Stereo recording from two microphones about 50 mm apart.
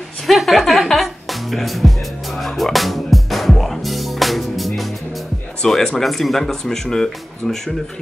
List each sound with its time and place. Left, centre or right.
0.3 s music: centre
5.6 s speech: centre